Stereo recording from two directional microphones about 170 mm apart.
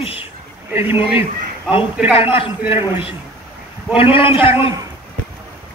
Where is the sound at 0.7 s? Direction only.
10° right (ahead or behind).